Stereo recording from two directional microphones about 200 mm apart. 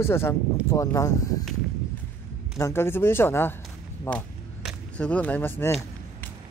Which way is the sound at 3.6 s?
5° left (ahead or behind).